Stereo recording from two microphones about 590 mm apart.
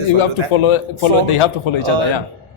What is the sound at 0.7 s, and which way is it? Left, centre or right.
Speech, left.